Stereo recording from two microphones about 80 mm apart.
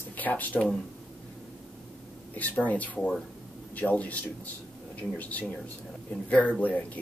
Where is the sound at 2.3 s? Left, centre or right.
Centre.